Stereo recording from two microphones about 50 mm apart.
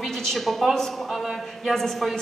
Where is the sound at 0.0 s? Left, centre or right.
Centre.